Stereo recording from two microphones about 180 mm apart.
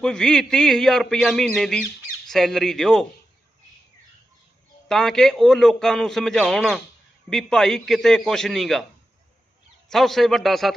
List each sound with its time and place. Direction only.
0.0 s a man's voice: 5° left (ahead or behind)
4.9 s a man's voice: 5° left (ahead or behind)
9.9 s a man's voice: centre (ahead or behind)